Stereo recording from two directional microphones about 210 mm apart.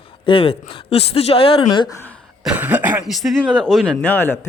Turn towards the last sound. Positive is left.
turn(degrees=10)  # may be behind; listen again after turning